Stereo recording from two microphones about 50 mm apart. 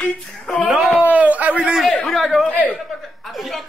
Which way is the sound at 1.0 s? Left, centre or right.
Right.